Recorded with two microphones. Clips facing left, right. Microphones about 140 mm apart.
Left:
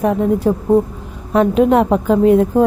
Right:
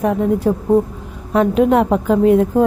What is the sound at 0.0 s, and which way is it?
A woman's voice, 35° left (ahead or behind).